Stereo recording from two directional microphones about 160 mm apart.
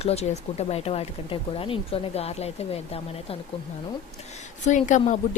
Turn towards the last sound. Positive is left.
turn(degrees=50)  # may be behind; listen again after turning